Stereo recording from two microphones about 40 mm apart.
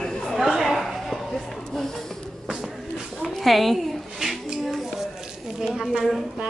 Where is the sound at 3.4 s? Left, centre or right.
Centre.